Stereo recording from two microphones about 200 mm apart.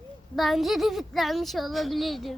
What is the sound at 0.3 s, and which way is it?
Speech, centre (ahead or behind).